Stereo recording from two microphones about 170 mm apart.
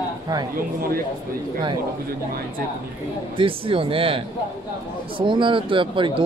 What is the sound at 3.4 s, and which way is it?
Speech, 30° right (ahead or behind).